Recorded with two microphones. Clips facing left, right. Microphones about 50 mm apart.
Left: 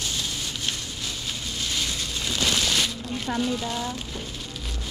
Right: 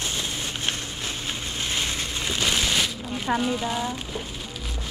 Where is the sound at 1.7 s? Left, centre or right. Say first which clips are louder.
Right 2 dB; right.